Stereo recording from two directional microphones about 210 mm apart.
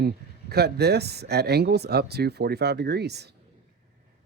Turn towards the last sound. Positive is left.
turn(degrees=-50)  # may be behind; listen again after turning